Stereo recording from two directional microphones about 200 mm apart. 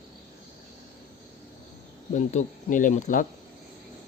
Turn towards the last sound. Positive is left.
turn(degrees=40)  # may be behind; listen again after turning